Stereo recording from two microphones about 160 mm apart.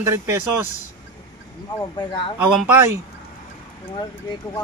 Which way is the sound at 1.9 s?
30° left (ahead or behind).